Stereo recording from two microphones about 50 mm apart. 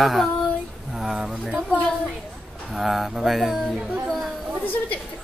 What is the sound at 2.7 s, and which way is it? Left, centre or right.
Speech, centre.